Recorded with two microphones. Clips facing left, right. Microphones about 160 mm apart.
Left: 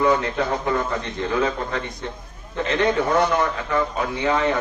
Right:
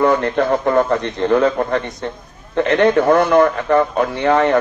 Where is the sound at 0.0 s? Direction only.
55° right (ahead or behind).